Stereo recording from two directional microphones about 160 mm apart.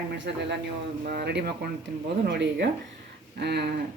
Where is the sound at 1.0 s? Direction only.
75° right (ahead or behind); by 3.8 s 90° right.